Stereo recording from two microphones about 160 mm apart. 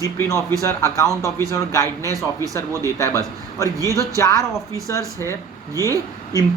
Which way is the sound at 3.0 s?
20° left (ahead or behind).